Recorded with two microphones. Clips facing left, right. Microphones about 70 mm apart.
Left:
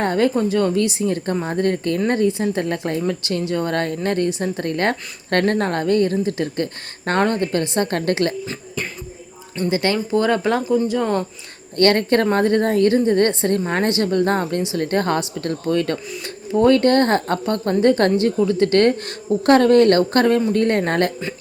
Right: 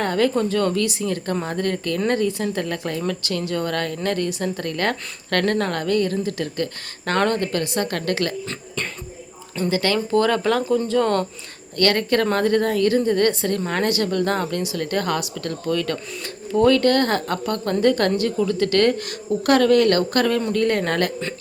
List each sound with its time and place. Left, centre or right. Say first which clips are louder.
0.0 s speech: left 2 dB; left
8.4 s speech: left 1 dB; centre
9.6 s speech: left 1 dB; left
10.6 s speech: even; centre
11.8 s speech: left 3 dB; left